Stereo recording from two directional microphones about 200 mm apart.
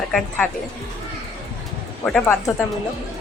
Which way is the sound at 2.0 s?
5° left (ahead or behind).